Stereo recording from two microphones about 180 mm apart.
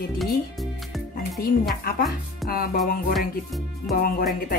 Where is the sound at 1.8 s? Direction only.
55° left (ahead or behind).